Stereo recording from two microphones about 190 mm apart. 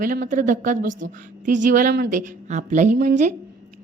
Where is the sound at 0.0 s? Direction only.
45° right (ahead or behind).